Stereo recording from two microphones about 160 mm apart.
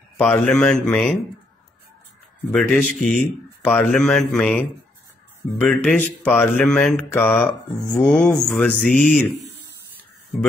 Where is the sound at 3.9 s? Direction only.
5° left (ahead or behind).